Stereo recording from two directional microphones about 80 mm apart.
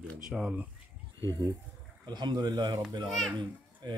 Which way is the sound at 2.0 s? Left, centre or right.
Right.